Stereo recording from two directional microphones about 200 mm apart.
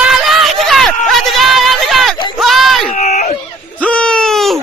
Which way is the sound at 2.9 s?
35° left (ahead or behind).